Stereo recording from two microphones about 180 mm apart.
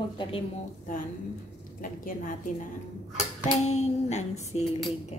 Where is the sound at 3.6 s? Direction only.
40° left (ahead or behind).